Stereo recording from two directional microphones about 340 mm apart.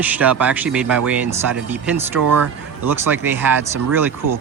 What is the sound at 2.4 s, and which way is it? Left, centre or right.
Speech, right.